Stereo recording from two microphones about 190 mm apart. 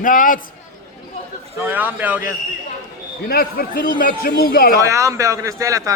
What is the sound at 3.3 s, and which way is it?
A man's voice, 55° left (ahead or behind).